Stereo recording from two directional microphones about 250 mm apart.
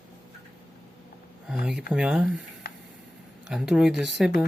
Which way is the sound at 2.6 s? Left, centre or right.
Left.